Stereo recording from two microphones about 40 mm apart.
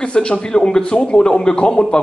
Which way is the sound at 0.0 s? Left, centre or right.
Left.